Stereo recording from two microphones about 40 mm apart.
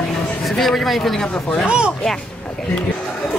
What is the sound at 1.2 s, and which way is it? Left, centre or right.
Speech, left.